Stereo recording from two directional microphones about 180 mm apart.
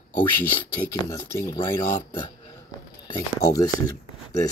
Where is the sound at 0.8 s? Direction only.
15° left (ahead or behind).